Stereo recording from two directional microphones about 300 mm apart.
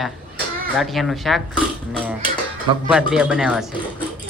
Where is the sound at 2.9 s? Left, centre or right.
Centre.